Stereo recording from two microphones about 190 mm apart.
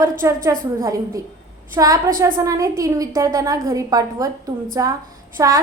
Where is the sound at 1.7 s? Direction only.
15° right (ahead or behind).